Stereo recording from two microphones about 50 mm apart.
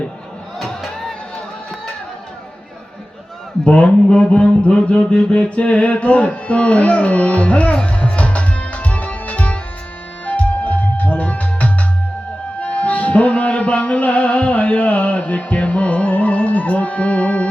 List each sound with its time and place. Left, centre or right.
0.6 s music: centre
3.6 s a man's voice: left
4.2 s mantra: centre
10.2 s music: left